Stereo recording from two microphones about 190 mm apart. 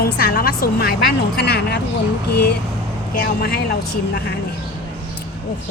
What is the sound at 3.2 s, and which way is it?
Speech, 55° left (ahead or behind).